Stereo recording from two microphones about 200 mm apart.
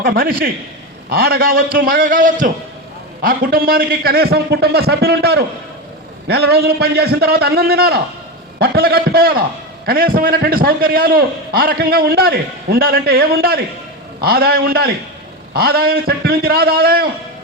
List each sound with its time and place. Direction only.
0.0 s a man's voice: 45° right (ahead or behind)